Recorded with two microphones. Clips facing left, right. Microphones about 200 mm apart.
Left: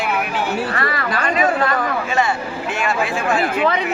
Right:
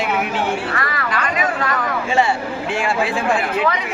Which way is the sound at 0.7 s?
30° left (ahead or behind).